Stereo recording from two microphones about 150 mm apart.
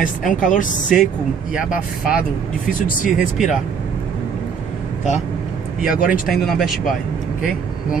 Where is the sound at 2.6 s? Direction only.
60° left (ahead or behind).